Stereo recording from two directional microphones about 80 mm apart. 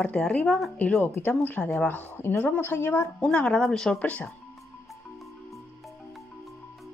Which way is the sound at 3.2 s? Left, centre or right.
Centre.